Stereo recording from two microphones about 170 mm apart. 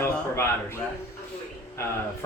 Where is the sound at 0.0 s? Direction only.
15° left (ahead or behind).